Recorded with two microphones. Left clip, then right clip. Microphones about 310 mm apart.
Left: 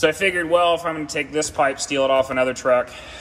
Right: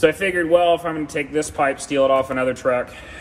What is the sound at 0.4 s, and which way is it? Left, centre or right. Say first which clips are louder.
A man's voice: right 4 dB; centre.